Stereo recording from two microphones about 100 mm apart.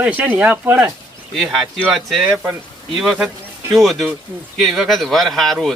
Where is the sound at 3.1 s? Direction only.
15° right (ahead or behind).